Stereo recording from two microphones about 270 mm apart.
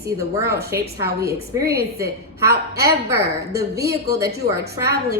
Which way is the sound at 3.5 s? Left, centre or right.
Centre.